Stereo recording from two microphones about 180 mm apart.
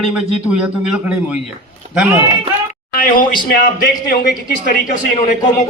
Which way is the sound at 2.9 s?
50° left (ahead or behind).